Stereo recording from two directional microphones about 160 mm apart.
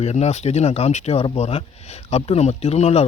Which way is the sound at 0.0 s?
40° left (ahead or behind).